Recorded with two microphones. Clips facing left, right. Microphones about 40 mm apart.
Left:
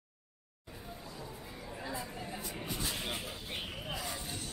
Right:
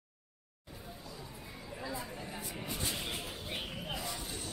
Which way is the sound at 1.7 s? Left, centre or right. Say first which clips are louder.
Even; centre.